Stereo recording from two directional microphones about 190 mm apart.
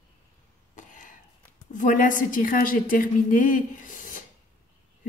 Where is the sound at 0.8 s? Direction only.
40° left (ahead or behind).